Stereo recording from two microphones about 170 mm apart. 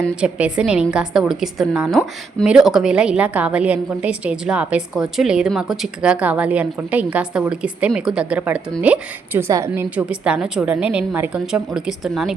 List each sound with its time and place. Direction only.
0.2 s a woman's voice: 5° right (ahead or behind)